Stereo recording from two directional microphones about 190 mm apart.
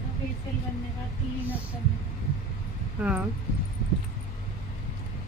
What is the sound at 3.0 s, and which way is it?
Speech, 5° right (ahead or behind).